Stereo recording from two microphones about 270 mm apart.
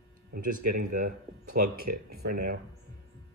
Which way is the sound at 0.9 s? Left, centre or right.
Right.